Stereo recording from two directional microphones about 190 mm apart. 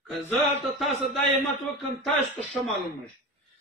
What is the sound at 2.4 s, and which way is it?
Speech, centre (ahead or behind).